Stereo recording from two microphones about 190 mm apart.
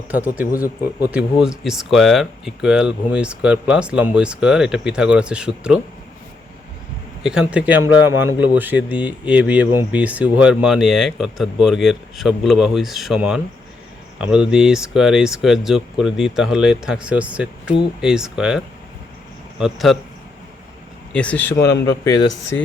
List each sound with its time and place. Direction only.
1.1 s speech: 5° right (ahead or behind)
7.2 s a man's voice: 5° right (ahead or behind)
21.1 s speech: 5° left (ahead or behind)